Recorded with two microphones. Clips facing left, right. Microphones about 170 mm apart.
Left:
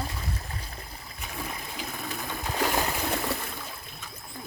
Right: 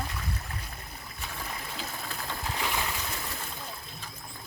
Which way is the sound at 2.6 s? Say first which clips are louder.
Left 7 dB; 45° left (ahead or behind).